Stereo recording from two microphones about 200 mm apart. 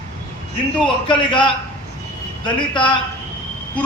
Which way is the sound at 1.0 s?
25° left (ahead or behind).